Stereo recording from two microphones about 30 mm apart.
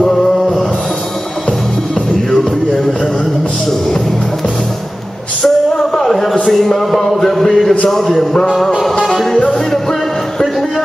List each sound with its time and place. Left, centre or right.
0.0 s music: centre
5.4 s music: centre
6.4 s a sound: centre
9.0 s music: centre
9.4 s music: centre